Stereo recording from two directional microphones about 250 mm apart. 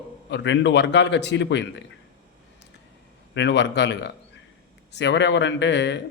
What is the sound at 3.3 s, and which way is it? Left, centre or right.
Speech, left.